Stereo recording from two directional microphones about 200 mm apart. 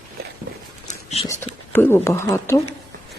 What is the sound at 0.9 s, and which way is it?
Whispering, 30° left (ahead or behind).